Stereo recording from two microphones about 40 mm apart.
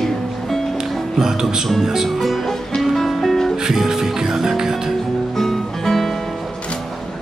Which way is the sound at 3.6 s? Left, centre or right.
Centre.